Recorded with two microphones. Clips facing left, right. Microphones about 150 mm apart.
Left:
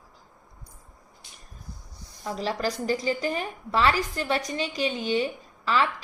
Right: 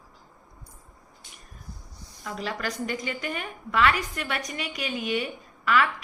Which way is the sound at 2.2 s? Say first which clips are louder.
Left 4 dB; 30° left (ahead or behind).